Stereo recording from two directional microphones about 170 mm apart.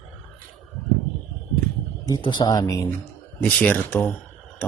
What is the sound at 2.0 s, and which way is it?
Speech, 25° left (ahead or behind).